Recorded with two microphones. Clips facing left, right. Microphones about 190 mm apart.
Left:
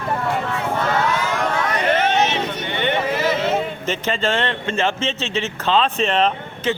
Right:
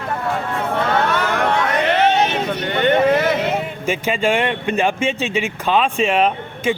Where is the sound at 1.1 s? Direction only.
65° right (ahead or behind).